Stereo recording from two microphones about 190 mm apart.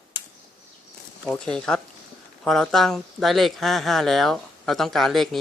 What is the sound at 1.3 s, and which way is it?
Speech, 5° left (ahead or behind).